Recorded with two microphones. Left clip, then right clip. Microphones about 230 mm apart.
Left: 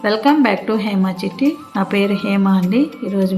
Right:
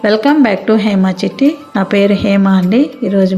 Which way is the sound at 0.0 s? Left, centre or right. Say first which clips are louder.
Right 4 dB; centre.